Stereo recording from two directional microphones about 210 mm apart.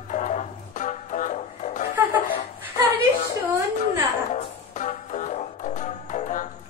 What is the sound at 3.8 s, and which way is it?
Music, 35° left (ahead or behind).